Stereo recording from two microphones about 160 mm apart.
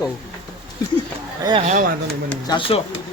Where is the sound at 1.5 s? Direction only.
35° right (ahead or behind).